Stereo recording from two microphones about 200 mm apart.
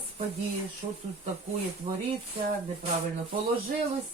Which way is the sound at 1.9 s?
40° right (ahead or behind).